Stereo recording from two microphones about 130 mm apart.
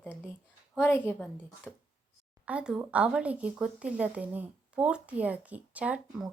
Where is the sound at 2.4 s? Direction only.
10° right (ahead or behind).